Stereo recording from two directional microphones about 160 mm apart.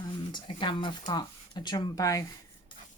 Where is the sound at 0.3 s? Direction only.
30° left (ahead or behind).